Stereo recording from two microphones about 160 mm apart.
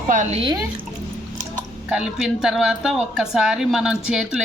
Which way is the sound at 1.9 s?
5° right (ahead or behind).